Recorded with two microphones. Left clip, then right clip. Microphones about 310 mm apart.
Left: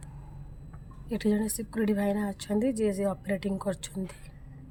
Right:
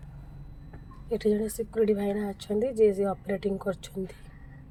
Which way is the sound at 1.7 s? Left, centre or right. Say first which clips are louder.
Right 3 dB; centre.